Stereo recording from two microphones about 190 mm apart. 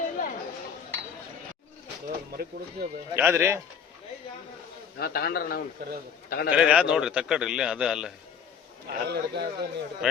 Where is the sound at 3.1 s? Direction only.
10° right (ahead or behind).